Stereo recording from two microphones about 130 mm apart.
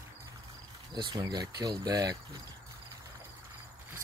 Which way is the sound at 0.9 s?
35° right (ahead or behind).